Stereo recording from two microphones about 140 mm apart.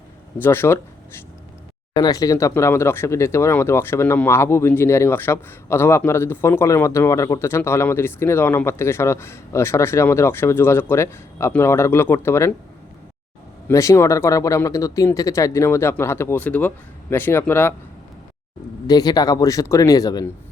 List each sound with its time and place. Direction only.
0.4 s speech: 15° left (ahead or behind)
13.7 s speech: 20° left (ahead or behind)
18.9 s speech: 30° left (ahead or behind)